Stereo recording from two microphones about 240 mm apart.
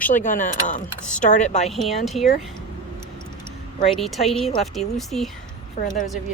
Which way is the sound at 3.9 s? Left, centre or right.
Centre.